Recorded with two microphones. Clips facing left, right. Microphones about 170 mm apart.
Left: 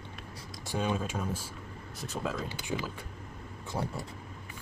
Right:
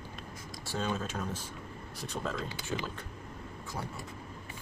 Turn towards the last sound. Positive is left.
turn(degrees=35)  # may be behind; listen again after turning